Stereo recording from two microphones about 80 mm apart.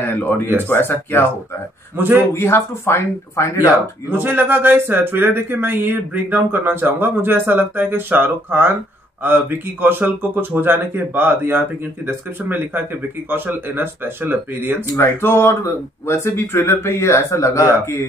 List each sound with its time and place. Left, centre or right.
0.0 s speech: left
2.0 s speech: right
2.3 s speech: left
3.6 s speech: right
15.0 s speech: left